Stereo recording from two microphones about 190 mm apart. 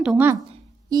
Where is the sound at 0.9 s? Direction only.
20° right (ahead or behind).